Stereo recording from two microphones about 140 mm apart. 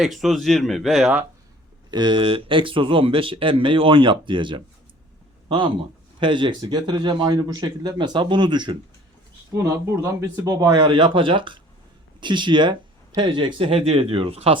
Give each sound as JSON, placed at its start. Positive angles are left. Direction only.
{"t": 0.0, "sound": "speech", "side_deg": 0}
{"t": 1.9, "sound": "speech", "side_deg": -35}
{"t": 9.6, "sound": "speech", "side_deg": -20}